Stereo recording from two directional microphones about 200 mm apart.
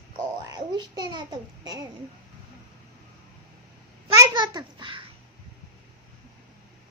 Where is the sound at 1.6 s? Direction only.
20° right (ahead or behind).